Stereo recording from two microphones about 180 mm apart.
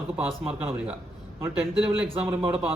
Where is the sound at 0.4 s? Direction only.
5° right (ahead or behind).